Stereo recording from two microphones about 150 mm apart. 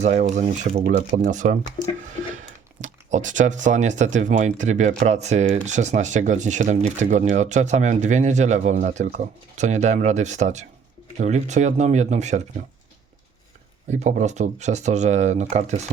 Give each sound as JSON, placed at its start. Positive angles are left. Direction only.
{"t": 0.0, "sound": "speech", "side_deg": -50}
{"t": 0.9, "sound": "speech", "side_deg": -70}
{"t": 1.8, "sound": "speech", "side_deg": 25}
{"t": 2.3, "sound": "speech", "side_deg": -55}
{"t": 13.9, "sound": "speech", "side_deg": -50}